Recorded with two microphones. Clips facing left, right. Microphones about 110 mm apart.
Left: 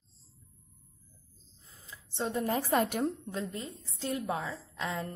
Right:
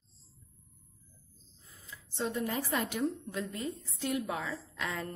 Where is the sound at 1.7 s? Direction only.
25° left (ahead or behind); by 3.1 s 50° left (ahead or behind).